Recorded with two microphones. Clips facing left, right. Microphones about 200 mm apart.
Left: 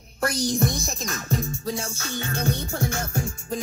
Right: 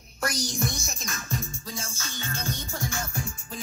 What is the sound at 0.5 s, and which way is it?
Music, 35° left (ahead or behind).